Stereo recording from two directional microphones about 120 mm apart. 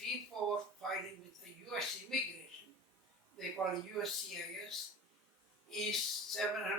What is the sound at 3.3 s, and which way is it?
Speech, centre (ahead or behind).